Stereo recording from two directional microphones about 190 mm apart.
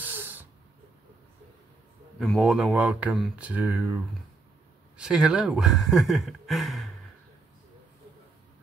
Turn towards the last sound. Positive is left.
turn(degrees=0)  # may be behind; listen again after turning